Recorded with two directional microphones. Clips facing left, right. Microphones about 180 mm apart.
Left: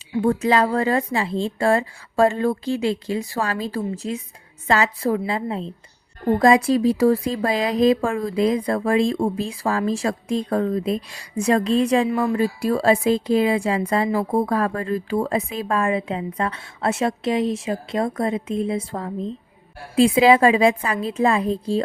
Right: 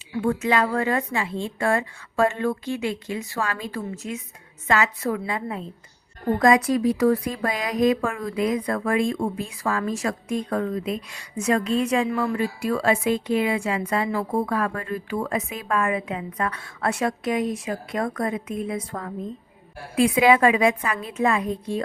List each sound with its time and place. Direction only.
0.2 s a woman's voice: 35° left (ahead or behind)